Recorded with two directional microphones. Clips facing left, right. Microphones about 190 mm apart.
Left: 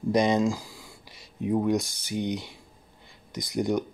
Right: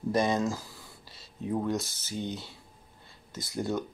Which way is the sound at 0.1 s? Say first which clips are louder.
Left 5 dB; 15° left (ahead or behind).